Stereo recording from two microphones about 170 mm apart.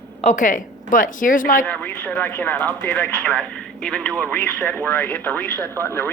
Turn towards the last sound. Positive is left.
turn(degrees=15)  # may be behind; listen again after turning